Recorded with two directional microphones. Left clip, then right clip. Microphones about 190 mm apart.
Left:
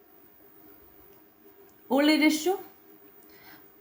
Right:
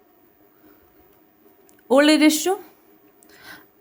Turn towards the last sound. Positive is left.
turn(degrees=-45)  # may be behind; listen again after turning